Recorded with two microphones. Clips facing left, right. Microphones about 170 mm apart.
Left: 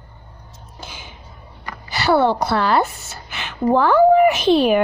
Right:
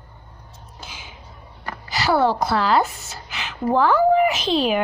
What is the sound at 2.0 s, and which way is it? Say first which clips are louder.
Speech: left 3 dB; 60° left (ahead or behind).